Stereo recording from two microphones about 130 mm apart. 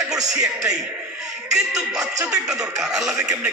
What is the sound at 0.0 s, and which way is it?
Music, 30° right (ahead or behind).